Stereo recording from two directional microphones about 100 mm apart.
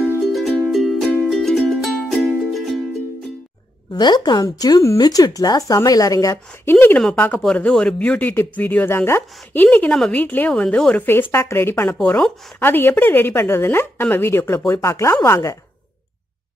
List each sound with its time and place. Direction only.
0.3 s music: centre (ahead or behind)
3.9 s speech: 45° left (ahead or behind)
6.3 s speech: 20° left (ahead or behind)
7.5 s speech: 10° left (ahead or behind)
11.1 s speech: 25° left (ahead or behind)